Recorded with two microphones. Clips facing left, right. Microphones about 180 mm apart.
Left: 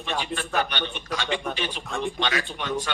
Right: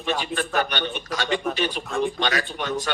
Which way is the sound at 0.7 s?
45° right (ahead or behind).